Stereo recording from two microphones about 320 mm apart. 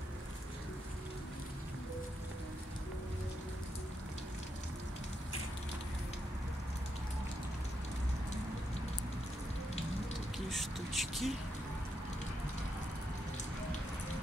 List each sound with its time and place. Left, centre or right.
10.5 s speech: centre